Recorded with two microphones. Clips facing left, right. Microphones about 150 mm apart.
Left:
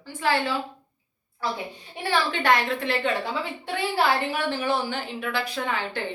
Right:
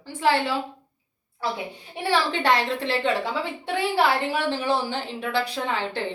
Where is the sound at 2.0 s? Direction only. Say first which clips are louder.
Right 1 dB; 30° right (ahead or behind).